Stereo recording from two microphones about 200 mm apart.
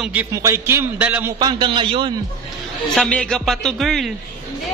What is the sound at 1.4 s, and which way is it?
Speech, 25° right (ahead or behind).